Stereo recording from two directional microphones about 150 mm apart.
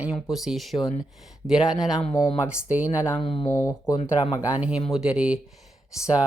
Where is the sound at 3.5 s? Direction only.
25° left (ahead or behind).